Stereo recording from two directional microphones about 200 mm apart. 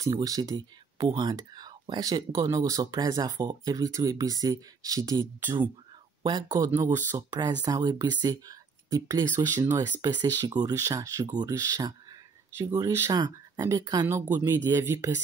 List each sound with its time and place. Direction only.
0.0 s speech: 15° right (ahead or behind)